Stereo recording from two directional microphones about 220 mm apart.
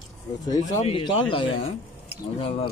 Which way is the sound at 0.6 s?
25° left (ahead or behind).